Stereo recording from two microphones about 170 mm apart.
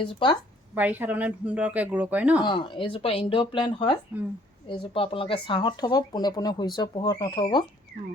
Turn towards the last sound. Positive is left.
turn(degrees=25)  # may be behind; listen again after turning